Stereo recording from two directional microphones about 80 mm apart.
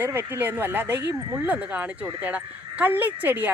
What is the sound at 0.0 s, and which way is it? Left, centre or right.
Speech, right.